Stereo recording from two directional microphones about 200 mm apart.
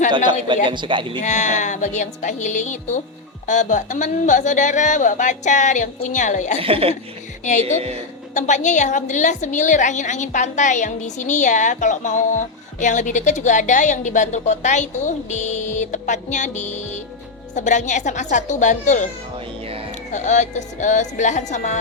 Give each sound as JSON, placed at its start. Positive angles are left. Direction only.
{"t": 0.7, "sound": "speech", "side_deg": -25}
{"t": 1.2, "sound": "a woman's voice", "side_deg": 35}
{"t": 6.6, "sound": "speech", "side_deg": -30}
{"t": 8.4, "sound": "a woman's voice", "side_deg": 35}
{"t": 20.1, "sound": "a woman's voice", "side_deg": 35}